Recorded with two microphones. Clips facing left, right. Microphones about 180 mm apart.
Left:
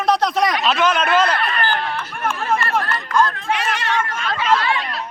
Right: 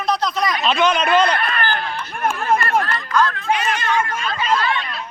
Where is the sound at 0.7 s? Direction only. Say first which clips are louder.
Right 1 dB; 5° left (ahead or behind).